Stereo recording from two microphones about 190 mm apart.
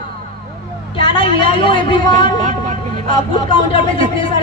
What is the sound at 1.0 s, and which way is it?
A woman's voice, 25° left (ahead or behind).